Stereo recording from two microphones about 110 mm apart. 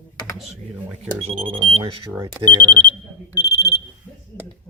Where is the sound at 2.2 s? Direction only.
40° right (ahead or behind).